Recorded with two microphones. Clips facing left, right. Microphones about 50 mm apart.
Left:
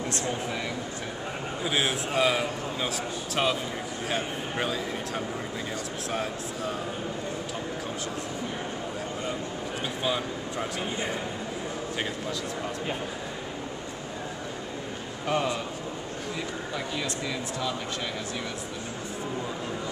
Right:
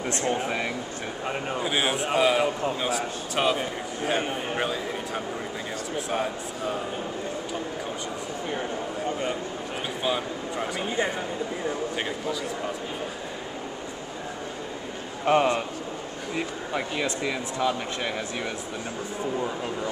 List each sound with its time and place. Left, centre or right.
0.1 s speech: right
1.6 s a man's voice: centre
10.0 s speech: centre
15.2 s a man's voice: right